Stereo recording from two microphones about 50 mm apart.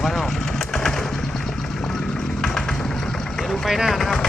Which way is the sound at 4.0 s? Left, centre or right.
Centre.